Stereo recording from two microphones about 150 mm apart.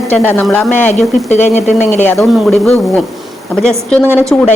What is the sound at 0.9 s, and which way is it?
Speech, 50° left (ahead or behind).